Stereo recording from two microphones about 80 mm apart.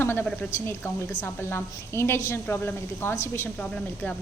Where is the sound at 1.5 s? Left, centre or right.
Left.